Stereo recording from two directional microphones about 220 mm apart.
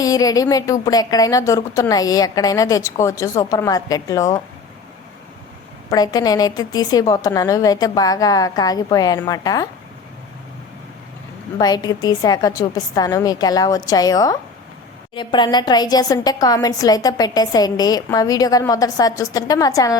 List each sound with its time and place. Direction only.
0.0 s a woman's voice: 15° left (ahead or behind)
5.9 s a woman's voice: 15° left (ahead or behind)
11.5 s a woman's voice: 20° left (ahead or behind)